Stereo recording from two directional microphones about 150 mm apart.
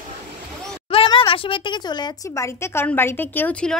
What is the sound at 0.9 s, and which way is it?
Speech, 35° left (ahead or behind).